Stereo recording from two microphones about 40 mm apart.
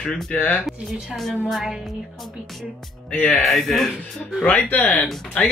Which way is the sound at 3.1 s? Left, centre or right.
Left.